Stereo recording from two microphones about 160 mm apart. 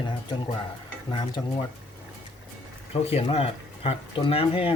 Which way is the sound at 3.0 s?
40° left (ahead or behind).